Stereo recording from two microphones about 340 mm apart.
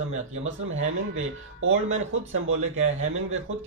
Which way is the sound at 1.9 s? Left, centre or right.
Right.